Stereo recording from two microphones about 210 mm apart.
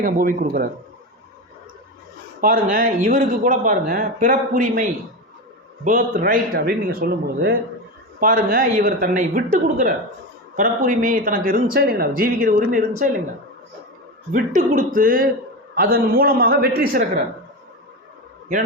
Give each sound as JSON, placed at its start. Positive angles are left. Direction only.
{"t": 0.0, "sound": "speech", "side_deg": -40}
{"t": 2.4, "sound": "a man's voice", "side_deg": -40}
{"t": 14.3, "sound": "a man's voice", "side_deg": -40}